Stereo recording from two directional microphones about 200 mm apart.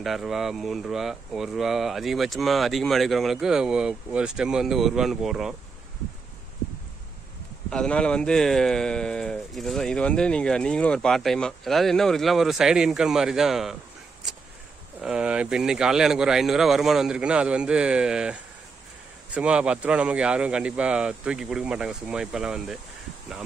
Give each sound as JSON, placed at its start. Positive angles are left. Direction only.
{"t": 0.0, "sound": "speech", "side_deg": 0}
{"t": 7.7, "sound": "speech", "side_deg": 5}
{"t": 15.0, "sound": "speech", "side_deg": -5}